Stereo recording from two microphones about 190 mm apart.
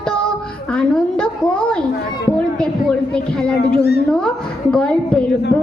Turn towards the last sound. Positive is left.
turn(degrees=5)  # may be behind; listen again after turning